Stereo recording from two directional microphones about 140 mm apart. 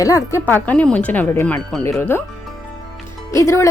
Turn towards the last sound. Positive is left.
turn(degrees=20)  # may be behind; listen again after turning